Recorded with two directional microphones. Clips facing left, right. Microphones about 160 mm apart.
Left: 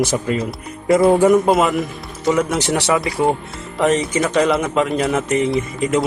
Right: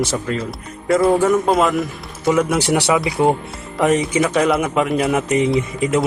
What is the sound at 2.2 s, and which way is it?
A man's voice, 5° right (ahead or behind).